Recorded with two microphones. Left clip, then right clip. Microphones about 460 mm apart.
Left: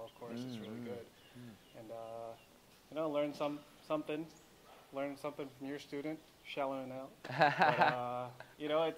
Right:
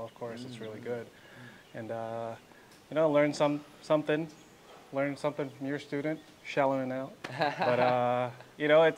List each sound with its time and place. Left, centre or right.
2.0 s speech: right
7.3 s speech: left
8.0 s speech: right